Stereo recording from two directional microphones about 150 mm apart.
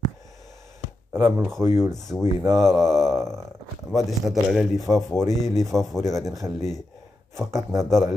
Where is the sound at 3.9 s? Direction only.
Centre (ahead or behind).